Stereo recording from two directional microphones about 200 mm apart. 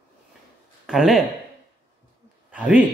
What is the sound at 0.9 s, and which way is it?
Speech, centre (ahead or behind).